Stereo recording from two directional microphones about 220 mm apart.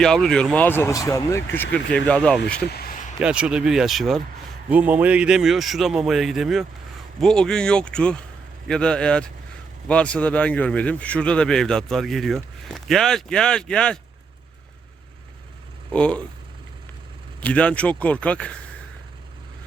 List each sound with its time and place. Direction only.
0.0 s a man's voice: centre (ahead or behind)
2.6 s a sound: 45° left (ahead or behind)
3.2 s a man's voice: 5° right (ahead or behind)
15.9 s a man's voice: 5° left (ahead or behind)
17.4 s a man's voice: 5° left (ahead or behind)